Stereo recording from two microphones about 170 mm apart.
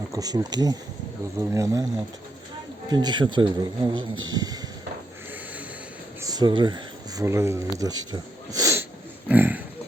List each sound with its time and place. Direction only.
0.1 s a man's voice: 20° right (ahead or behind)
2.9 s a man's voice: 25° right (ahead or behind)
6.2 s speech: 25° right (ahead or behind)